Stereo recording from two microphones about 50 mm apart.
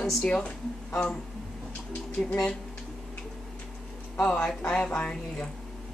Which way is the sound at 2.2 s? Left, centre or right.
Centre.